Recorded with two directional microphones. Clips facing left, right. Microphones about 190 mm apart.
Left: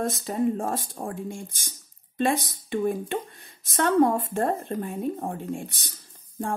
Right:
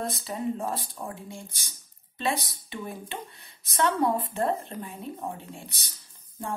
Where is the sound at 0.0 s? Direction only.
45° left (ahead or behind).